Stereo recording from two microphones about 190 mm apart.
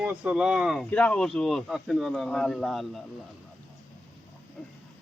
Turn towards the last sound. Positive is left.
turn(degrees=0)  # may be behind; listen again after turning